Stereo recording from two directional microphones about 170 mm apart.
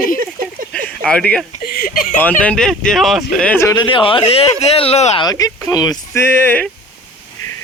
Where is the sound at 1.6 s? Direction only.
60° left (ahead or behind).